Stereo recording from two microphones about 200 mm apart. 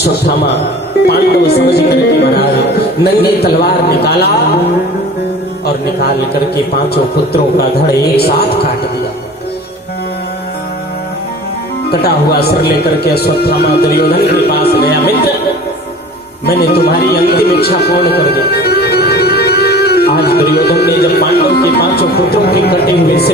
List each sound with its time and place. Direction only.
1.0 s speech: 55° left (ahead or behind)
8.1 s speech: 50° left (ahead or behind)
11.9 s speech: 50° left (ahead or behind)
16.8 s speech: 50° left (ahead or behind)